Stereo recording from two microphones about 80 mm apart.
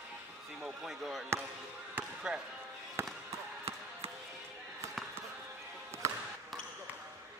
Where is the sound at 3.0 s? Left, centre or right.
Right.